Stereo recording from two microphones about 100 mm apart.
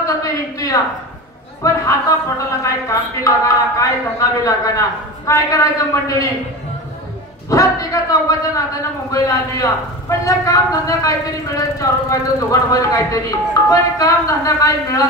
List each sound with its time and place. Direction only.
0.0 s a sound: 35° left (ahead or behind)
1.6 s a man's voice: 30° left (ahead or behind)
7.4 s a man's voice: 35° left (ahead or behind)